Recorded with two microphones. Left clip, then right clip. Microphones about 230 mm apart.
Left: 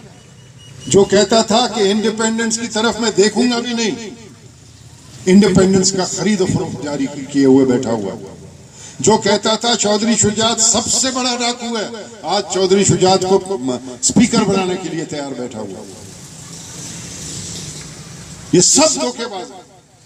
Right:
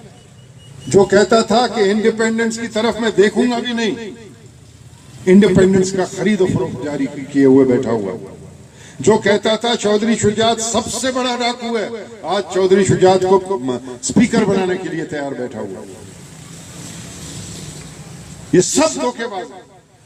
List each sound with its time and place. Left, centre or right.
1.1 s a man's voice: left
5.2 s a man's voice: left
18.5 s a man's voice: left